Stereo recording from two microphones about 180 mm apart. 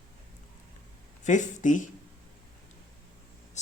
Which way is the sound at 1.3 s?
45° left (ahead or behind).